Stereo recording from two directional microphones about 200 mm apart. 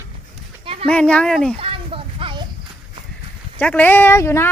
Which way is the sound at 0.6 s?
30° right (ahead or behind).